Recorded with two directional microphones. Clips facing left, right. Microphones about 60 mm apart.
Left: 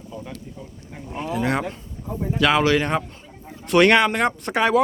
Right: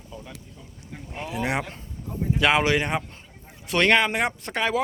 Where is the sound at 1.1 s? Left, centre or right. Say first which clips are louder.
Left 4 dB; centre.